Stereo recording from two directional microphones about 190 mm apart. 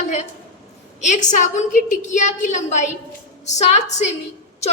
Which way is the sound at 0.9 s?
40° left (ahead or behind).